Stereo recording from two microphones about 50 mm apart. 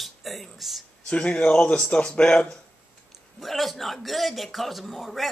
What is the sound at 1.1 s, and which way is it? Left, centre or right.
A man's voice, left.